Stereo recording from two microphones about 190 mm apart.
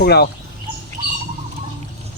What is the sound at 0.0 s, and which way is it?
Speech, 55° left (ahead or behind).